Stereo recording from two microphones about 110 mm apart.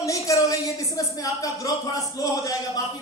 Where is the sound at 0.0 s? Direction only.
30° left (ahead or behind).